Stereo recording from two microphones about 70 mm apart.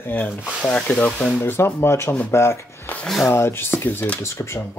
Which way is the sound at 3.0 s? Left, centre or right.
Centre.